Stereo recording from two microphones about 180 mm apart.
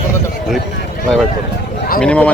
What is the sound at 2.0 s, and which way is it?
Speech, 5° left (ahead or behind).